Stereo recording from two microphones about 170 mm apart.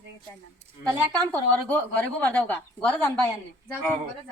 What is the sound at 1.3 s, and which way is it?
A woman's voice, 10° left (ahead or behind).